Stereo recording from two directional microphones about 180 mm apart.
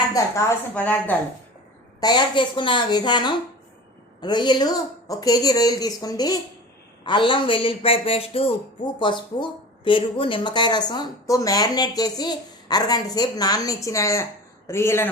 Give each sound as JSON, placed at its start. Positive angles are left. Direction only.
{"t": 0.1, "sound": "a woman's voice", "side_deg": 15}
{"t": 2.0, "sound": "a man's voice", "side_deg": 25}